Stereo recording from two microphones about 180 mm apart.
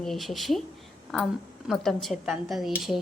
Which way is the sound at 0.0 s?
Centre (ahead or behind).